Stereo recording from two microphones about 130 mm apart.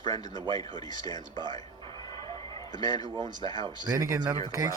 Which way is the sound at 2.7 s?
35° right (ahead or behind).